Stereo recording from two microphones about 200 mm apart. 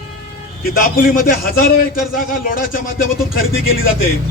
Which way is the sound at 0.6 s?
45° left (ahead or behind).